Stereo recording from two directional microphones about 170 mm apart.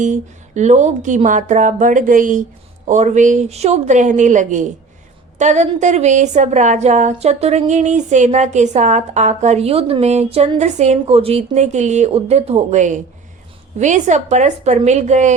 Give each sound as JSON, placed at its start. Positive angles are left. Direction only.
{"t": 0.0, "sound": "a woman's voice", "side_deg": -45}